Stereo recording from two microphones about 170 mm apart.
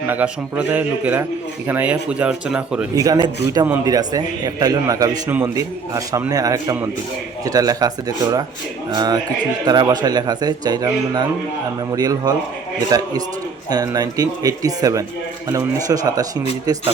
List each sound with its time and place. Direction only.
0.1 s speech: 10° right (ahead or behind)
3.0 s a man's voice: 20° right (ahead or behind)